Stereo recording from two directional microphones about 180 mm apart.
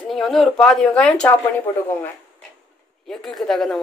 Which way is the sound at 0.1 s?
Centre (ahead or behind).